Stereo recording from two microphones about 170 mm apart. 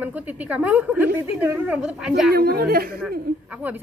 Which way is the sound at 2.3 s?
65° right (ahead or behind).